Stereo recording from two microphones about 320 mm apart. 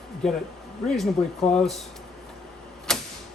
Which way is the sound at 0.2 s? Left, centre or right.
Centre.